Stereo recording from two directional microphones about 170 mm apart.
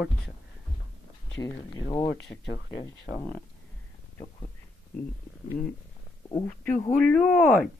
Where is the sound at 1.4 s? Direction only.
25° left (ahead or behind).